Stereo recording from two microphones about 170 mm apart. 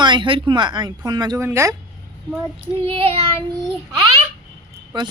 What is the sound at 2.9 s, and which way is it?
Child singing, 35° right (ahead or behind).